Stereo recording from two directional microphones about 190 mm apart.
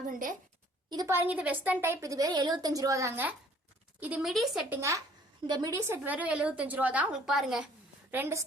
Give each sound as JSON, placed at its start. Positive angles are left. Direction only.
{"t": 0.1, "sound": "a woman's voice", "side_deg": -45}
{"t": 0.9, "sound": "a woman's voice", "side_deg": -20}
{"t": 4.8, "sound": "a woman's voice", "side_deg": -15}
{"t": 6.0, "sound": "a woman's voice", "side_deg": -5}
{"t": 8.1, "sound": "a woman's voice", "side_deg": -15}